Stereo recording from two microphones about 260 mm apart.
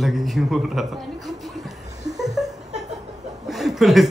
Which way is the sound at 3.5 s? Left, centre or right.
Centre.